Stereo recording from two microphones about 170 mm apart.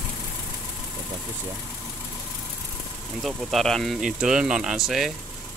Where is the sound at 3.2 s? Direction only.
Centre (ahead or behind).